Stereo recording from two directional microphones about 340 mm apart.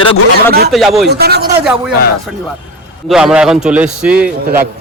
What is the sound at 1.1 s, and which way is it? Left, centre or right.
Speech, right.